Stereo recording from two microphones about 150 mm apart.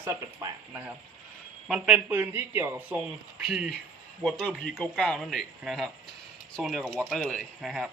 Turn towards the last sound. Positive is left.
turn(degrees=0)  # may be behind; listen again after turning